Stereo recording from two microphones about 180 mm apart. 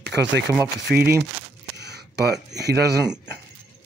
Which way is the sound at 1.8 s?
65° right (ahead or behind).